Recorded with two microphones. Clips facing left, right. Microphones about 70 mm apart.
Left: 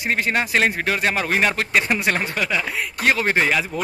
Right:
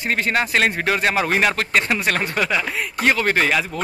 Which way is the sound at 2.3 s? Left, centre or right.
Centre.